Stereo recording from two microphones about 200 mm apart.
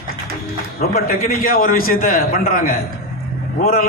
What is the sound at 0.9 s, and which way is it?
A man's voice, 45° left (ahead or behind).